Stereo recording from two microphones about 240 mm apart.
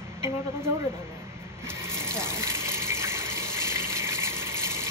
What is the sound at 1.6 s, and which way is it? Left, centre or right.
Water, centre.